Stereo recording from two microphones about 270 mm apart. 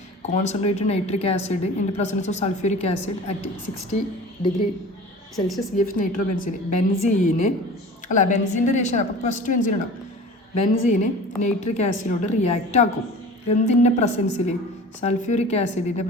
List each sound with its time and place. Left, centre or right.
0.2 s a woman's voice: left
5.7 s a woman's voice: left